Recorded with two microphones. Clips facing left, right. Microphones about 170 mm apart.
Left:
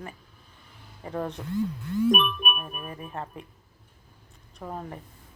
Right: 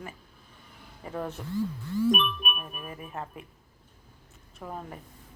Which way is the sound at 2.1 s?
55° left (ahead or behind).